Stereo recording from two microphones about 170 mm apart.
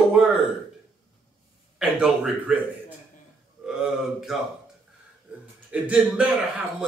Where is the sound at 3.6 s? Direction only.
5° right (ahead or behind).